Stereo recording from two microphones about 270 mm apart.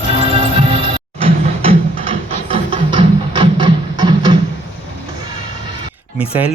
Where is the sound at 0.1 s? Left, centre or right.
Right.